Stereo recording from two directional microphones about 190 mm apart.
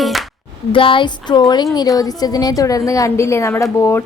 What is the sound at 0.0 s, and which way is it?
Music, centre (ahead or behind).